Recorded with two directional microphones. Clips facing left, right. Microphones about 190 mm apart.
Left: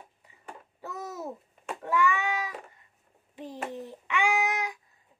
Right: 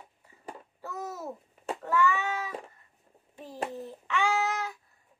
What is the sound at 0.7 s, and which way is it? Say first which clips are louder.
Babbling: even; 15° left (ahead or behind).